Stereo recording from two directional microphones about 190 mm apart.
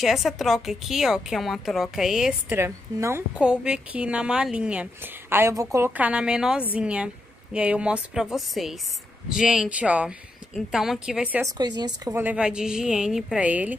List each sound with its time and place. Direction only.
0.0 s a woman's voice: centre (ahead or behind)
2.6 s a woman's voice: 15° right (ahead or behind)
11.4 s speech: 20° right (ahead or behind)
12.2 s a woman's voice: 5° right (ahead or behind)